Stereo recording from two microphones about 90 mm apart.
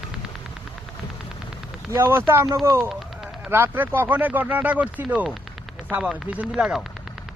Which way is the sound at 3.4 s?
20° right (ahead or behind).